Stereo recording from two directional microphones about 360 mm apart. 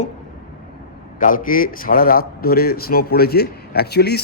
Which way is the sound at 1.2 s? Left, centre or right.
Left.